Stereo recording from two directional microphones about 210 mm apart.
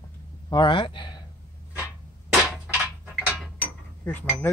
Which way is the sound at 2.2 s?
5° right (ahead or behind).